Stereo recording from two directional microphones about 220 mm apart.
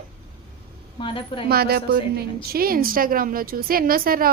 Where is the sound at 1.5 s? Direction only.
45° right (ahead or behind).